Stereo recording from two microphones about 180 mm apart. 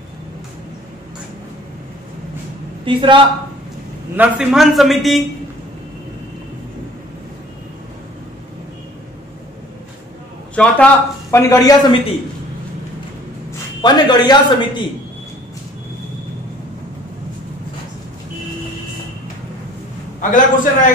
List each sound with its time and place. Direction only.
2.8 s a man's voice: 30° right (ahead or behind)
4.2 s a man's voice: 5° right (ahead or behind)
10.5 s a man's voice: 5° left (ahead or behind)
13.7 s a man's voice: 25° left (ahead or behind)
20.2 s a man's voice: 45° left (ahead or behind)